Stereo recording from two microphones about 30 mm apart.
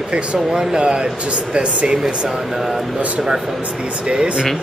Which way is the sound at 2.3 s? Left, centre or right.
Centre.